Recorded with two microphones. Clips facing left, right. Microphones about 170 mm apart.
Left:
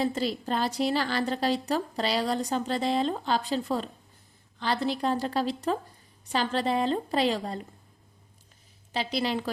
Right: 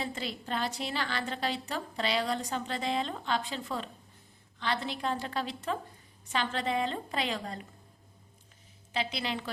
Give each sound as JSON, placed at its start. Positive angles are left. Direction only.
{"t": 0.0, "sound": "a woman's voice", "side_deg": 40}
{"t": 8.9, "sound": "a woman's voice", "side_deg": 40}